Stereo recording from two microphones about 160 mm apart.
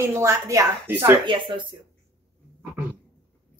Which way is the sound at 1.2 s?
30° right (ahead or behind).